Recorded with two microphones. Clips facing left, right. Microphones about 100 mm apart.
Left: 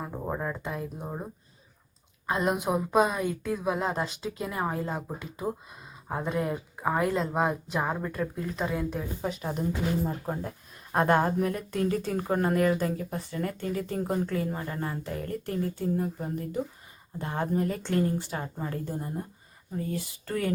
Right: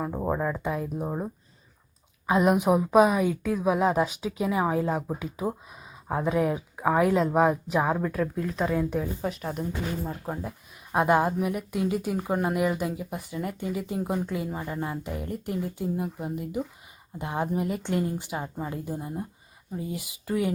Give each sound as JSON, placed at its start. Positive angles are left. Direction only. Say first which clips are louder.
{"t": 0.0, "sound": "a sound", "louder": "right 6 dB", "side_deg": -25}
{"t": 0.3, "sound": "a woman's voice", "louder": "right 4 dB", "side_deg": -10}
{"t": 2.2, "sound": "speech", "louder": "right 6 dB", "side_deg": -5}
{"t": 10.9, "sound": "a woman's voice", "louder": "right 1 dB", "side_deg": -10}